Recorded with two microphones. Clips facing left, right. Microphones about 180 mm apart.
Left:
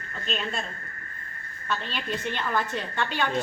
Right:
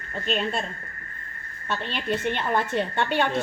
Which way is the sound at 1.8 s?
55° right (ahead or behind).